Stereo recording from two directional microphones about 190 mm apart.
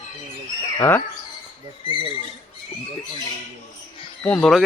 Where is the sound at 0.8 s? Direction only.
10° left (ahead or behind).